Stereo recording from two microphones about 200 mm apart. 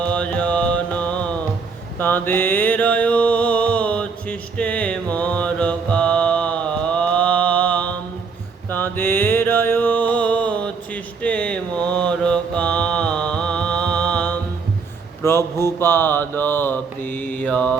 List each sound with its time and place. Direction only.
0.0 s music: 5° left (ahead or behind)
15.2 s a sound: 15° left (ahead or behind)
17.1 s mantra: 10° left (ahead or behind)